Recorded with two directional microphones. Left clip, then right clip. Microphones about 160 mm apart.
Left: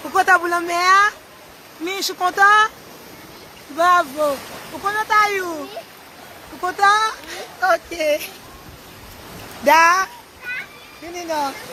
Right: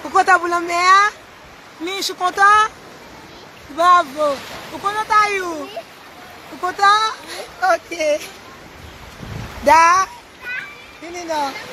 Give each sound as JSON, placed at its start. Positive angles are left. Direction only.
{"t": 0.1, "sound": "speech", "side_deg": -10}
{"t": 3.8, "sound": "speech", "side_deg": 0}
{"t": 9.6, "sound": "speech", "side_deg": 0}
{"t": 11.1, "sound": "speech", "side_deg": 0}